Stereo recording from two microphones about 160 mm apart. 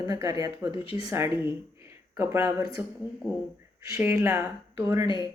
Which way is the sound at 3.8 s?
15° right (ahead or behind).